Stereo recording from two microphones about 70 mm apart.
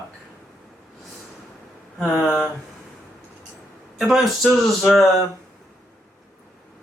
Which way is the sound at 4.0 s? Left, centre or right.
Centre.